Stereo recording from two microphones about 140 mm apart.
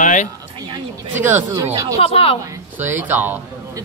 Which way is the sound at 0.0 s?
60° left (ahead or behind).